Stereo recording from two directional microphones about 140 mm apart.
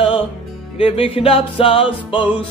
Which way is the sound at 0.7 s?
40° left (ahead or behind).